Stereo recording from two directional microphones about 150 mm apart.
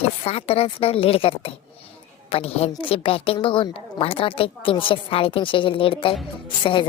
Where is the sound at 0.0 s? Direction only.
45° left (ahead or behind).